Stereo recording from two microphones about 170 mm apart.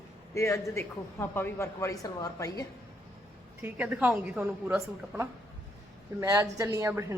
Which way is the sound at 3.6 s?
10° right (ahead or behind).